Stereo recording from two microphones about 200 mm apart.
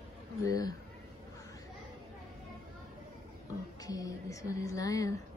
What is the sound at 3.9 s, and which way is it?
Speech, 15° left (ahead or behind).